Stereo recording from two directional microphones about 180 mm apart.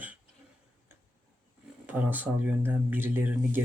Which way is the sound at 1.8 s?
10° right (ahead or behind).